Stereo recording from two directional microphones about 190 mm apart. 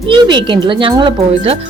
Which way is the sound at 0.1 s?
25° right (ahead or behind).